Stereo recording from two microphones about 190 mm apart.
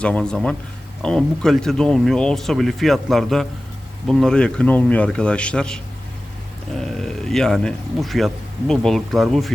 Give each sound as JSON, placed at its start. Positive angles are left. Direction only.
{"t": 0.0, "sound": "speech", "side_deg": 5}